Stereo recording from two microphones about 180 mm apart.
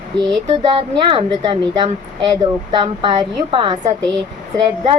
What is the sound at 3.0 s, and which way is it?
A woman's voice, 30° right (ahead or behind).